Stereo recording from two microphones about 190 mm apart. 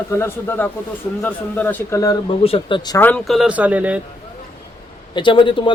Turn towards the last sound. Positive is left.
turn(degrees=25)  # may be behind; listen again after turning